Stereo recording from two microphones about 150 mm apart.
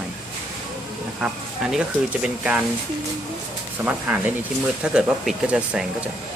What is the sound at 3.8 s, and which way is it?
Speech, 10° right (ahead or behind).